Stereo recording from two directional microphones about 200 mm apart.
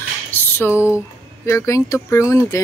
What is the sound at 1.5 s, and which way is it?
Speech, 15° left (ahead or behind).